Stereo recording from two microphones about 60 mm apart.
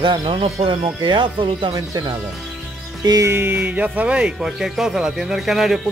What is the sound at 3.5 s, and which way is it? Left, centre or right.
Music, right.